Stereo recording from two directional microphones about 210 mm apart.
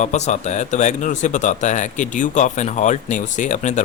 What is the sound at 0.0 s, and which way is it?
Speech, 35° left (ahead or behind).